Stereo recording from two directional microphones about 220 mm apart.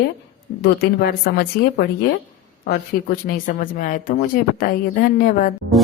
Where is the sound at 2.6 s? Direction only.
45° left (ahead or behind).